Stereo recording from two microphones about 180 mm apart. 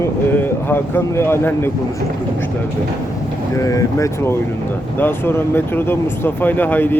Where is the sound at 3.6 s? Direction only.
15° left (ahead or behind).